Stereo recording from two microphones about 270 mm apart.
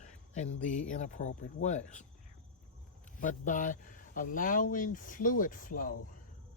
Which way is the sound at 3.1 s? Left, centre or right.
Left.